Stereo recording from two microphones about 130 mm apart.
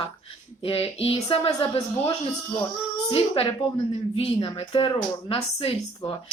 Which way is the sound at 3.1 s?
45° left (ahead or behind).